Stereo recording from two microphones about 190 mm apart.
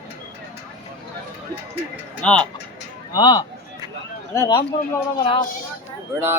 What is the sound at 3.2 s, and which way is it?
Speech, 20° left (ahead or behind).